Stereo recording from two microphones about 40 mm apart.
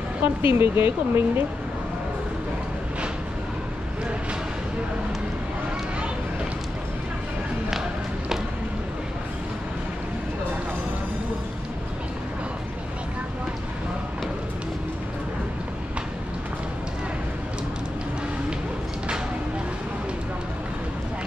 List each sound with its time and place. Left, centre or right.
0.2 s speech: right